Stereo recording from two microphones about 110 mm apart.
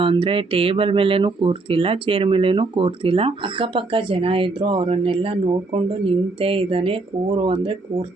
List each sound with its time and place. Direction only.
0.0 s speech: 50° right (ahead or behind)